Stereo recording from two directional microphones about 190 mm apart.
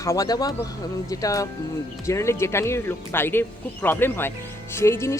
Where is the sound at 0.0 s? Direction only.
15° left (ahead or behind).